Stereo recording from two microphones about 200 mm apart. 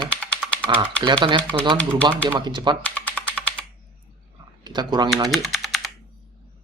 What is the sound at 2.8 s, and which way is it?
Typing, 5° left (ahead or behind).